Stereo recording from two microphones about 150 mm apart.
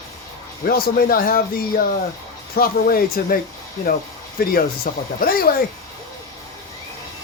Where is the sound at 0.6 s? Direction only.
75° left (ahead or behind).